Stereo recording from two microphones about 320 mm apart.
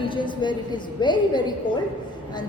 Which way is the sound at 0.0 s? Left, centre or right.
Centre.